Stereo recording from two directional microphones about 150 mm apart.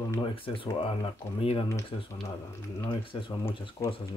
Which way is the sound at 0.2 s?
35° left (ahead or behind).